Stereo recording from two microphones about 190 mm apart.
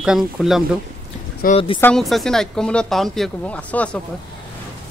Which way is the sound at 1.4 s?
45° left (ahead or behind).